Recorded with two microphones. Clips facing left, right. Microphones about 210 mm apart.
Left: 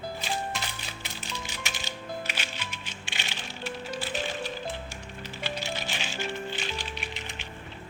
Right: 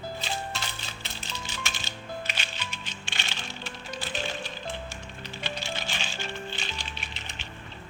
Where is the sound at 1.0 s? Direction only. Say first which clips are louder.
Left 2 dB; 15° left (ahead or behind).